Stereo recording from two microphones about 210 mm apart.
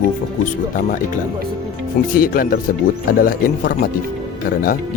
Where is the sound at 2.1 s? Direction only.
45° left (ahead or behind).